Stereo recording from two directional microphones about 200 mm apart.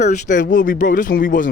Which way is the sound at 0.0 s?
40° left (ahead or behind).